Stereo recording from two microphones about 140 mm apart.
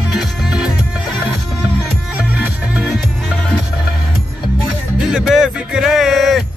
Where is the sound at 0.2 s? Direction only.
Centre (ahead or behind).